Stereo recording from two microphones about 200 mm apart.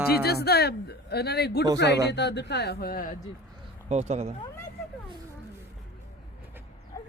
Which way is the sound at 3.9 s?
35° right (ahead or behind).